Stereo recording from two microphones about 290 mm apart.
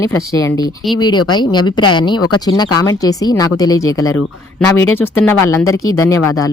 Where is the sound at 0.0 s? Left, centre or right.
Centre.